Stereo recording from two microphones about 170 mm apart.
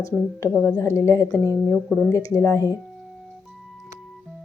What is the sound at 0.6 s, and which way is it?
Speech, 15° left (ahead or behind).